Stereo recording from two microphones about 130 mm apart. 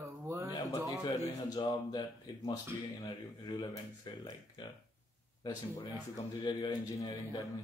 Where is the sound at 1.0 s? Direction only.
35° left (ahead or behind).